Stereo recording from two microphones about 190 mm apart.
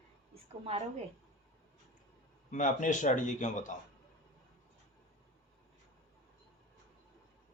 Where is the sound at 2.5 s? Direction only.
40° left (ahead or behind).